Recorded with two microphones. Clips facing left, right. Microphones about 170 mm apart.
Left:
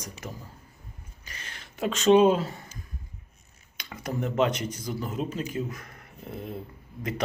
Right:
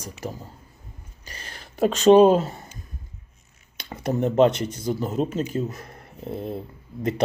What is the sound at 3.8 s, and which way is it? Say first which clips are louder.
Speech: right 7 dB; 30° right (ahead or behind).